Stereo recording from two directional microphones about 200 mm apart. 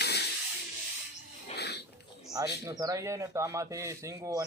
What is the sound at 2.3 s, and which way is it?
Speech, 15° right (ahead or behind).